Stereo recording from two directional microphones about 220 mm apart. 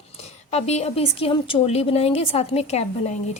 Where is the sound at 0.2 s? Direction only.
30° left (ahead or behind).